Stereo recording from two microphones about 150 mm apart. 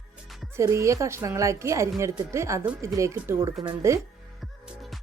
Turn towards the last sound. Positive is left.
turn(degrees=-20)  # may be behind; listen again after turning